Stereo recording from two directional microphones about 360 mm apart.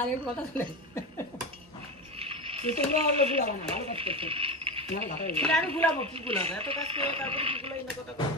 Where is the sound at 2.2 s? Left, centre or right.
Centre.